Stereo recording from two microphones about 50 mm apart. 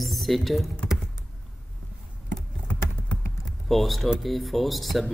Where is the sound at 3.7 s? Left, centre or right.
Centre.